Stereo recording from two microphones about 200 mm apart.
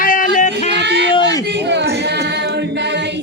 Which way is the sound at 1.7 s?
60° right (ahead or behind).